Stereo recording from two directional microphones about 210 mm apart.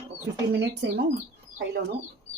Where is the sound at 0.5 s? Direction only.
50° right (ahead or behind).